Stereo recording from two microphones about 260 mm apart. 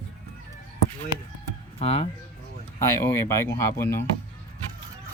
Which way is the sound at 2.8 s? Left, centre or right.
Centre.